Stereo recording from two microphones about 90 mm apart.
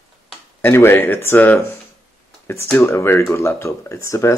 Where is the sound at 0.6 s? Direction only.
25° left (ahead or behind).